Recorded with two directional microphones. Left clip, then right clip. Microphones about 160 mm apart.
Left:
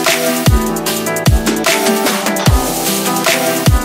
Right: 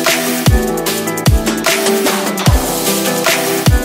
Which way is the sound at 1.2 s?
Centre (ahead or behind).